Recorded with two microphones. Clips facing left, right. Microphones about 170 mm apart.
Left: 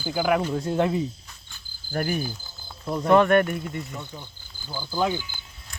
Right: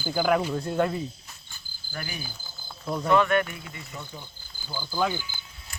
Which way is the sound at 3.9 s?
5° right (ahead or behind).